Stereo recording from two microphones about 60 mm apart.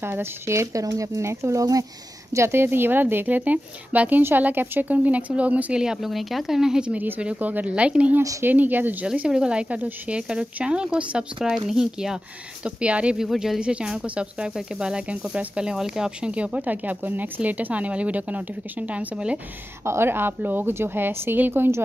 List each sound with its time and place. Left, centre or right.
0.0 s speech: right
2.3 s a woman's voice: right
4.2 s speech: right
5.8 s speech: centre
7.3 s speech: right
8.2 s speech: right
8.5 s a woman's voice: right
9.0 s speech: centre
12.6 s speech: centre
13.2 s speech: centre
13.6 s speech: centre
19.8 s a woman's voice: right